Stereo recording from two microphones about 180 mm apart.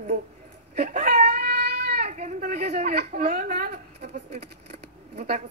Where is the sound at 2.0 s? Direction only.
40° right (ahead or behind).